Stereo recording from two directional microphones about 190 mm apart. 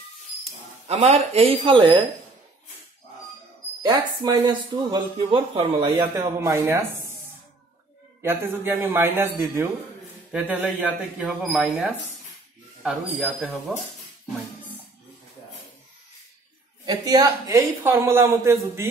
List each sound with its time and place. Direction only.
0.4 s speech: 35° right (ahead or behind)
3.8 s speech: 20° right (ahead or behind)
8.2 s a man's voice: 10° right (ahead or behind)
16.8 s a man's voice: 20° right (ahead or behind)